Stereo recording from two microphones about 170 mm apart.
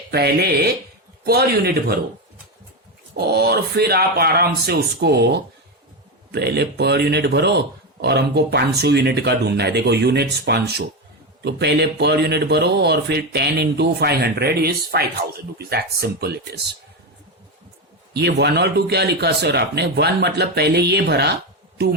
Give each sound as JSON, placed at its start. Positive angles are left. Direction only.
{"t": 0.1, "sound": "speech", "side_deg": -70}
{"t": 3.2, "sound": "speech", "side_deg": -70}
{"t": 18.1, "sound": "speech", "side_deg": -80}